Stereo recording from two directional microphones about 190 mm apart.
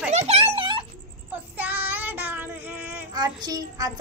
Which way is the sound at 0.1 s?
35° right (ahead or behind).